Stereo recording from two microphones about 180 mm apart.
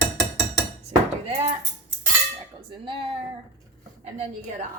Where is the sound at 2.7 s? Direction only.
25° right (ahead or behind).